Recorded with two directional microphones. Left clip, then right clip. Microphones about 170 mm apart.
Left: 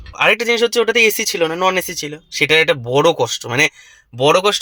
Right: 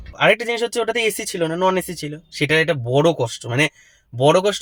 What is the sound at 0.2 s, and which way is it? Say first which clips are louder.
Speech: left 3 dB; 15° right (ahead or behind).